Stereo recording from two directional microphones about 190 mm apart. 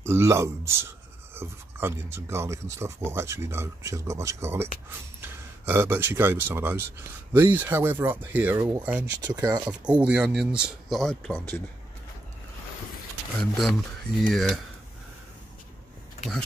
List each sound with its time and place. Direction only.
0.0 s speech: 15° right (ahead or behind)
9.7 s speech: 5° right (ahead or behind)
13.4 s speech: centre (ahead or behind)